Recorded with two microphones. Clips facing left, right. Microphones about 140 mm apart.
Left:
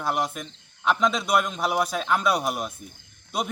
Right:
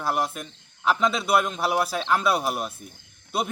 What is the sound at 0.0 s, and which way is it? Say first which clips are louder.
A man's voice: even; centre (ahead or behind).